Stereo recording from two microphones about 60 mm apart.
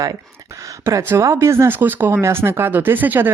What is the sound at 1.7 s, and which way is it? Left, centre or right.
Speech, right.